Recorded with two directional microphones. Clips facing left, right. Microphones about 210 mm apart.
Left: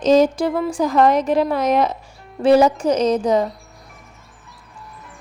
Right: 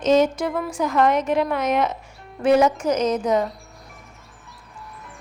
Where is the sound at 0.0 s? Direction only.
35° left (ahead or behind).